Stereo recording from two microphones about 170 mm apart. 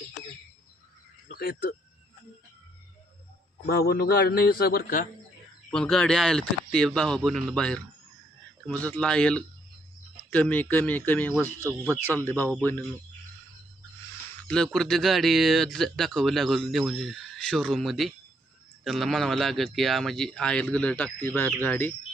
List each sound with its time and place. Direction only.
1.3 s speech: 60° left (ahead or behind)
3.7 s a man's voice: 65° left (ahead or behind)
5.7 s speech: 5° left (ahead or behind)
14.4 s speech: 5° left (ahead or behind)